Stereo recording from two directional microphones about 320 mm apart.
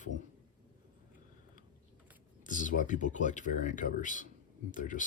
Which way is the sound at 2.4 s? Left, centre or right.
Left.